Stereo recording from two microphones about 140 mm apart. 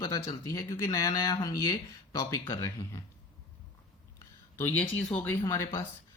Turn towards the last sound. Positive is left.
turn(degrees=20)  # may be behind; listen again after turning